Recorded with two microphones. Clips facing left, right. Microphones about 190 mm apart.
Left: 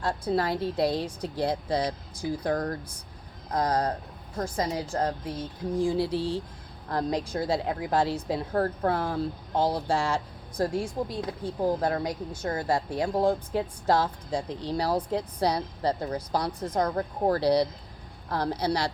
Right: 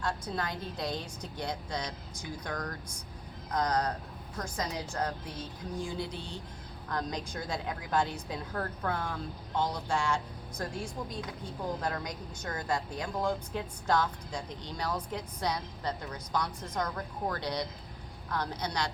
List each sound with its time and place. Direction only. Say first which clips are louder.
0.0 s a woman's voice: left 8 dB; 30° left (ahead or behind)